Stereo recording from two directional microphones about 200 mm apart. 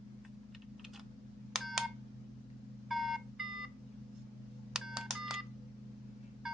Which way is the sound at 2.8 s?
Centre (ahead or behind).